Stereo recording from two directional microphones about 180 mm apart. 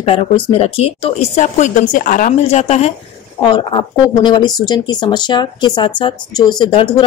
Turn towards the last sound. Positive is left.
turn(degrees=30)  # may be behind; listen again after turning